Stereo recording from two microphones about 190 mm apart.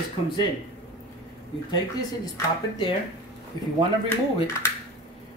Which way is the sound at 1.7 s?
20° left (ahead or behind).